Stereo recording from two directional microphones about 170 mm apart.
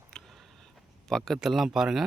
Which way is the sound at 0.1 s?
Centre (ahead or behind).